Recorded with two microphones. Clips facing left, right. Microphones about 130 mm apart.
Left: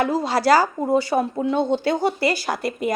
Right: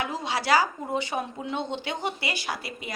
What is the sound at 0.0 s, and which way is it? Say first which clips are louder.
A woman's voice: left 9 dB; 40° left (ahead or behind).